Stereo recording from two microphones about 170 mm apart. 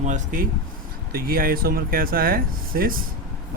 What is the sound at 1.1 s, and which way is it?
Speech, 60° right (ahead or behind).